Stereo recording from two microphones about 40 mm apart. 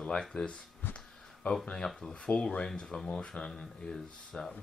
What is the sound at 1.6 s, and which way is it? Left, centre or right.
Speech, centre.